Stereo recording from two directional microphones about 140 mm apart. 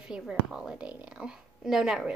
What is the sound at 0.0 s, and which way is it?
Speech, 5° right (ahead or behind).